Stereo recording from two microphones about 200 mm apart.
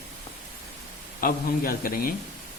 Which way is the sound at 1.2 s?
45° left (ahead or behind).